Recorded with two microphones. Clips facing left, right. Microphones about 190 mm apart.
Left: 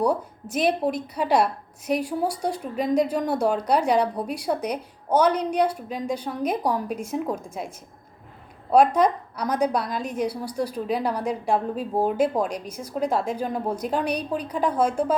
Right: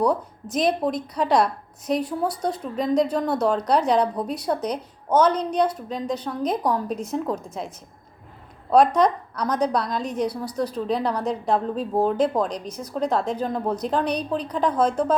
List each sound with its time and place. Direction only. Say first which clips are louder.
0.0 s a woman's voice: right 1 dB; 10° left (ahead or behind)
8.7 s a woman's voice: right 1 dB; 10° left (ahead or behind)